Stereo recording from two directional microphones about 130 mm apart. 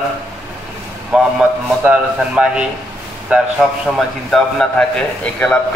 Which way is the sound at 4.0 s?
5° left (ahead or behind).